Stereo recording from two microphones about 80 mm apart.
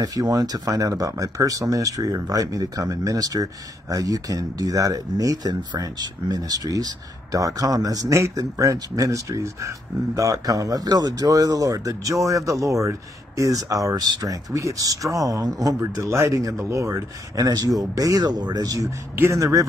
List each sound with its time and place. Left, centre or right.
0.0 s speech: right
8.1 s speech: right
19.1 s speech: right